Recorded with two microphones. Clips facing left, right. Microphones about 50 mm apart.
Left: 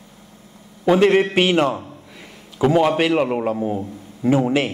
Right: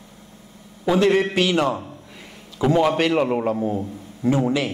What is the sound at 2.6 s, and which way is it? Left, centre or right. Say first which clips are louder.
A man's voice: left 2 dB; centre.